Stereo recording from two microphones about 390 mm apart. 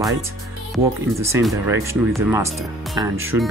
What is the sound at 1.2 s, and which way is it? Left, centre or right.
Speech, centre.